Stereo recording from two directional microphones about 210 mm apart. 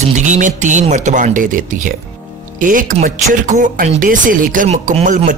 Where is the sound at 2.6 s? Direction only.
40° right (ahead or behind).